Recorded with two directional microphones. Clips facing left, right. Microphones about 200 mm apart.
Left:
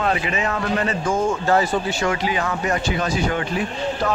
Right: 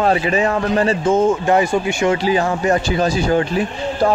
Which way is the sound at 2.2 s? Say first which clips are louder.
Right 6 dB; 30° right (ahead or behind).